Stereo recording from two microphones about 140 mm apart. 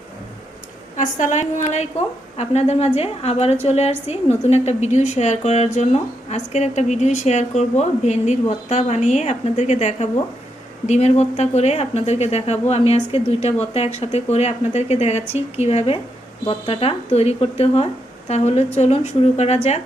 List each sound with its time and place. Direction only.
0.9 s a woman's voice: 60° left (ahead or behind)